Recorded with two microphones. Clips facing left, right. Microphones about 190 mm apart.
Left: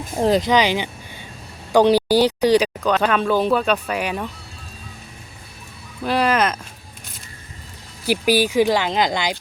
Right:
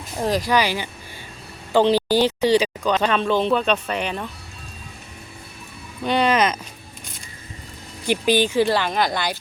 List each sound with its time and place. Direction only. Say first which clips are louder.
0.2 s speech: left 4 dB; 25° left (ahead or behind); by 4.3 s 10° left (ahead or behind)
6.0 s speech: even; 5° left (ahead or behind)
8.0 s speech: left 1 dB; 10° left (ahead or behind)